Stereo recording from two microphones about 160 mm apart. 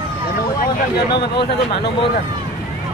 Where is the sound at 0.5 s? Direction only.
75° left (ahead or behind).